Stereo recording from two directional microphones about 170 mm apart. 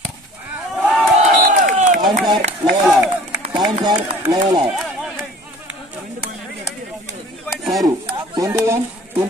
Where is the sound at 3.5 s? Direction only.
25° right (ahead or behind).